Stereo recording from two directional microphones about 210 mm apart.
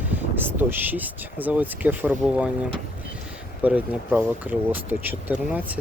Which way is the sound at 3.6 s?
5° right (ahead or behind).